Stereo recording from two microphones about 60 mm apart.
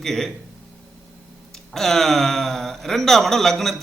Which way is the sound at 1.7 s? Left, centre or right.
Centre.